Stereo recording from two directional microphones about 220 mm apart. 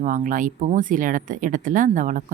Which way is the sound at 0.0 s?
35° right (ahead or behind).